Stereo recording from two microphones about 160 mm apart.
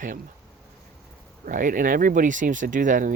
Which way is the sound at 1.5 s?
55° right (ahead or behind).